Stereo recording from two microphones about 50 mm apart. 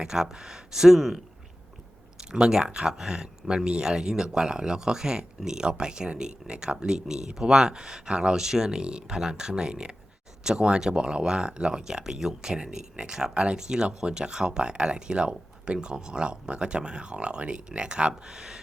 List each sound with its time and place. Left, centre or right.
0.0 s speech: centre
2.3 s speech: centre